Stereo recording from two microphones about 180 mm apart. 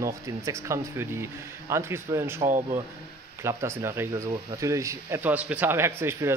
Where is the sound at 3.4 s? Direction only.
15° right (ahead or behind).